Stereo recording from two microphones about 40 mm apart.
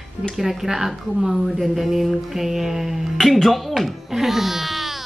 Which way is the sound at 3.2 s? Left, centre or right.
Centre.